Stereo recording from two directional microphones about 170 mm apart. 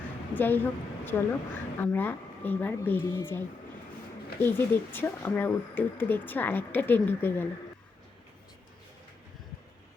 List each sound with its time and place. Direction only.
0.3 s a woman's voice: 10° left (ahead or behind)
4.4 s a woman's voice: 15° left (ahead or behind)